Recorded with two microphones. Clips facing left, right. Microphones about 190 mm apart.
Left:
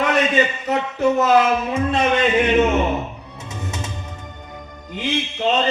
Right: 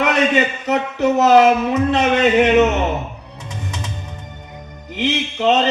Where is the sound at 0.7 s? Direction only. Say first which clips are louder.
Right 5 dB; 70° right (ahead or behind).